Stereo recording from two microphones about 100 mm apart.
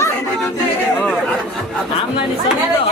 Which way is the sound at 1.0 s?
10° left (ahead or behind).